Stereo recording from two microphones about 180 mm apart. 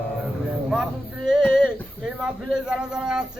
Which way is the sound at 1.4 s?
10° left (ahead or behind).